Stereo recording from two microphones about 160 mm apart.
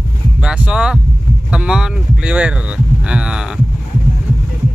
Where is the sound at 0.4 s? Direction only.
5° right (ahead or behind).